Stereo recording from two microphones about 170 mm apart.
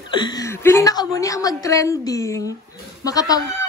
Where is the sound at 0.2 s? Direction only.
20° left (ahead or behind).